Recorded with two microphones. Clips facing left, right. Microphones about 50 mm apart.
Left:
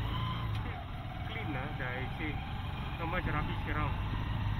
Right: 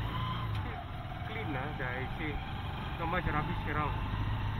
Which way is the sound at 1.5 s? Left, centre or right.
Right.